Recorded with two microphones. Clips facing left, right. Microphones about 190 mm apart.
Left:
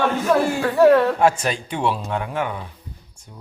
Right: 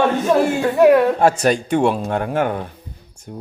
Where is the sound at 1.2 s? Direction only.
40° right (ahead or behind).